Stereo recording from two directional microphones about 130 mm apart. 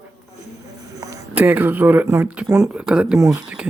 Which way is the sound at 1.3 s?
15° right (ahead or behind).